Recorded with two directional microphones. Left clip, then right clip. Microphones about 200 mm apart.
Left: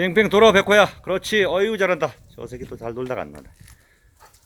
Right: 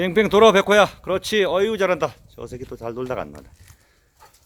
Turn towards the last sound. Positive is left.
turn(degrees=-5)  # may be behind; listen again after turning